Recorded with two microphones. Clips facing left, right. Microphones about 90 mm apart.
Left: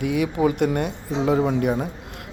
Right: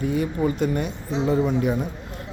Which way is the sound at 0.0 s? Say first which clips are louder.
Left 2 dB; 70° left (ahead or behind).